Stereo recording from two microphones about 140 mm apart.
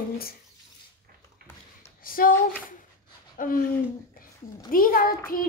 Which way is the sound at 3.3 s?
75° left (ahead or behind).